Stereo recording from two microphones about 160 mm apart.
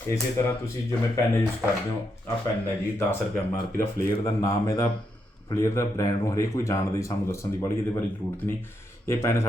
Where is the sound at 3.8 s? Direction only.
20° left (ahead or behind).